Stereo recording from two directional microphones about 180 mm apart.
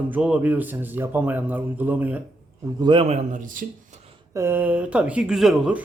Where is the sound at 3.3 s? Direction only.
50° right (ahead or behind).